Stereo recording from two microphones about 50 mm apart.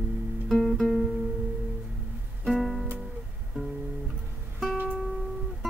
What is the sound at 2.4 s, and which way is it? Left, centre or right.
Music, centre.